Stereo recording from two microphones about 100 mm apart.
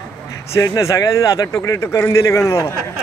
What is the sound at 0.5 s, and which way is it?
Speech, 35° left (ahead or behind).